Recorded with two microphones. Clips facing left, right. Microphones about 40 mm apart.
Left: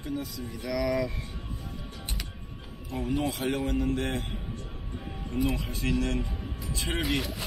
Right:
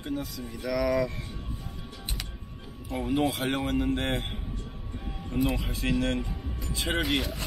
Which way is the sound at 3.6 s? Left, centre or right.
Right.